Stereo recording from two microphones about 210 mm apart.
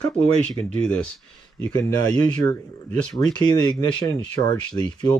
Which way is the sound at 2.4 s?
10° left (ahead or behind).